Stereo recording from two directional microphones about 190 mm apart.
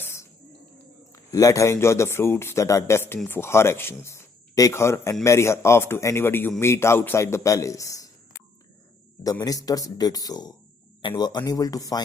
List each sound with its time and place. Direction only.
0.0 s a sound: 15° left (ahead or behind)
1.1 s a man's voice: 15° left (ahead or behind)
9.2 s speech: 20° left (ahead or behind)